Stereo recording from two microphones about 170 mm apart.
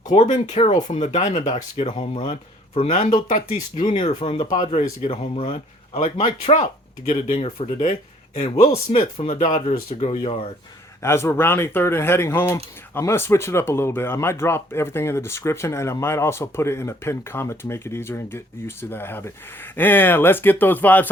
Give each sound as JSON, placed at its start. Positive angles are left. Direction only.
{"t": 0.1, "sound": "speech", "side_deg": 45}
{"t": 3.2, "sound": "speech", "side_deg": 50}
{"t": 4.2, "sound": "speech", "side_deg": 35}
{"t": 4.4, "sound": "speech", "side_deg": 45}
{"t": 8.9, "sound": "speech", "side_deg": 35}
{"t": 11.0, "sound": "speech", "side_deg": 15}